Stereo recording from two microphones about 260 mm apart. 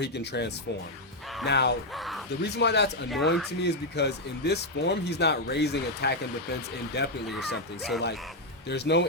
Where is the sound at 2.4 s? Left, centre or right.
Left.